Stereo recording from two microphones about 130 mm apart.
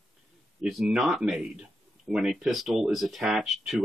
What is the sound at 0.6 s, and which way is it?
Speech, 5° right (ahead or behind).